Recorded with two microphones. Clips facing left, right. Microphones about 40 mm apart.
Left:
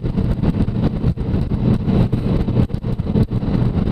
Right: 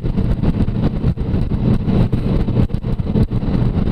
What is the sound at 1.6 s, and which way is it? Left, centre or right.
Vehicle, right.